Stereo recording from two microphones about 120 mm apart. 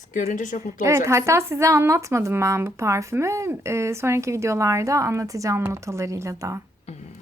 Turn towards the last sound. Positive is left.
turn(degrees=-25)  # may be behind; listen again after turning